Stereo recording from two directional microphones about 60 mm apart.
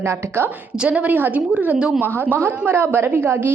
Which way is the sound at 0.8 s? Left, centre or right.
Right.